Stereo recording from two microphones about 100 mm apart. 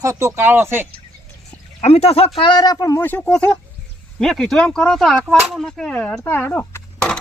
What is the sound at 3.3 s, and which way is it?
Speech, 10° left (ahead or behind).